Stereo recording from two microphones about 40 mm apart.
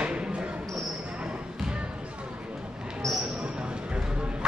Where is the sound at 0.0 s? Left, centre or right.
Right.